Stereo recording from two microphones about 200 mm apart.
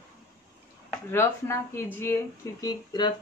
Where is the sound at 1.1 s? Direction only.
10° left (ahead or behind).